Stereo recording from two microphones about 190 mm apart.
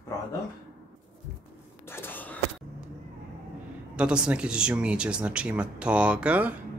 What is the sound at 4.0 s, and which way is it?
Speech, 5° right (ahead or behind).